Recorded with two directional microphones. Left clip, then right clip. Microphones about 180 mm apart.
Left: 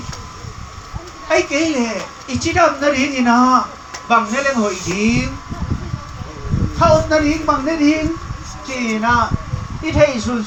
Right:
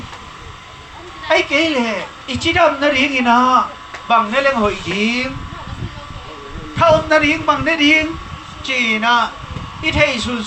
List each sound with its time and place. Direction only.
1.3 s a woman's voice: 50° right (ahead or behind)
6.7 s music: 75° right (ahead or behind)
8.6 s a woman's voice: 35° right (ahead or behind)